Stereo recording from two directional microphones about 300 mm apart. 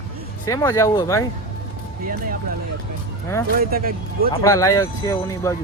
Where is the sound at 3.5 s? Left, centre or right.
Right.